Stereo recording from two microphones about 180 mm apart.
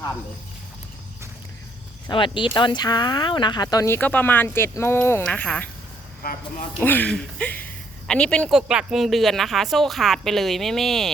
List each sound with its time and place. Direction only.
2.0 s speech: 25° left (ahead or behind); by 5.6 s 10° left (ahead or behind)
6.7 s a woman's voice: 10° left (ahead or behind)